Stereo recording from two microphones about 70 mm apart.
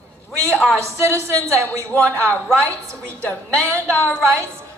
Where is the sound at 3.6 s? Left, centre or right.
Left.